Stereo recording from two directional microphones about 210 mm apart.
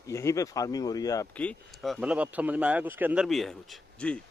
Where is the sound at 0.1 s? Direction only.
15° left (ahead or behind).